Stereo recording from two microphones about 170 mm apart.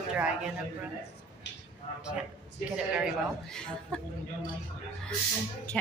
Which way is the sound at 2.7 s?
5° right (ahead or behind).